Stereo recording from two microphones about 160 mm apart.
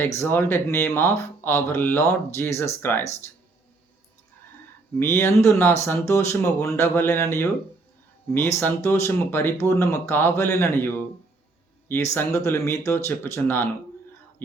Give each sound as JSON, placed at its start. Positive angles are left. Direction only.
{"t": 0.0, "sound": "speech", "side_deg": 15}
{"t": 4.9, "sound": "speech", "side_deg": 15}
{"t": 12.1, "sound": "speech", "side_deg": 15}